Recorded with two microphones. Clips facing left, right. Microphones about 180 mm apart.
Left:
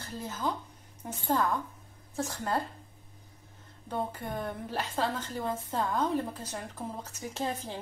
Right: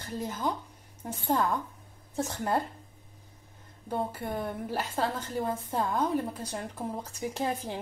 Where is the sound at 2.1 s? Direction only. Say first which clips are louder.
Right 2 dB; 25° right (ahead or behind).